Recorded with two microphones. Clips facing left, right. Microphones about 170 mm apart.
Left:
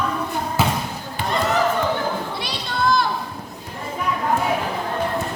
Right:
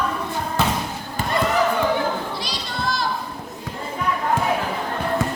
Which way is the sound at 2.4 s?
55° left (ahead or behind).